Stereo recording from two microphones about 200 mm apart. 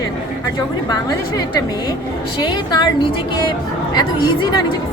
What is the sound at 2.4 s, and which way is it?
A woman's voice, 20° left (ahead or behind).